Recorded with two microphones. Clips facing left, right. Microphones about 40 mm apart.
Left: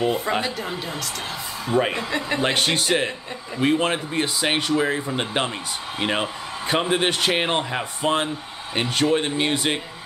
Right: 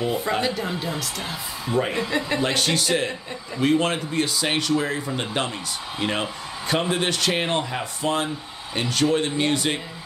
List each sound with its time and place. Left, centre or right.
0.4 s a woman's voice: centre
1.7 s speech: left
2.0 s speech: centre
2.4 s speech: left